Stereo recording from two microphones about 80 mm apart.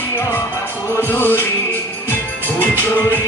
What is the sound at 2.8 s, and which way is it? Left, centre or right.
Music, left.